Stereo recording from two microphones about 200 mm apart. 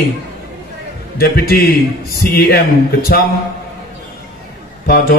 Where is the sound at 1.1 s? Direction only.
50° left (ahead or behind).